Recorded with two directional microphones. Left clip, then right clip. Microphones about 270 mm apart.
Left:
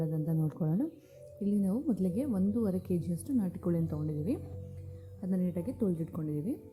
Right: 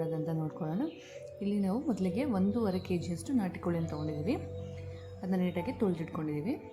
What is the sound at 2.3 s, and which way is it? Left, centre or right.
Speech, centre.